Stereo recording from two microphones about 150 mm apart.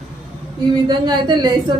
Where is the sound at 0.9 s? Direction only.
30° right (ahead or behind).